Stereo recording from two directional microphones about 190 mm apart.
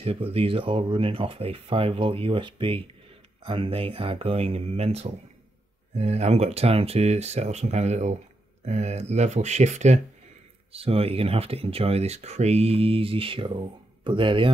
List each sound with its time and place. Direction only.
0.0 s speech: 30° right (ahead or behind)